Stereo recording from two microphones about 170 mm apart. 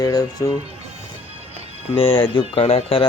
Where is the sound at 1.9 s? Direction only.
35° left (ahead or behind).